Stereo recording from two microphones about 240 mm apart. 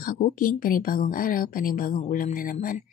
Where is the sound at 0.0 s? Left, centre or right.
Left.